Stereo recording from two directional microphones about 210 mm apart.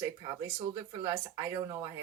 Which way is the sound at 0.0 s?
15° right (ahead or behind).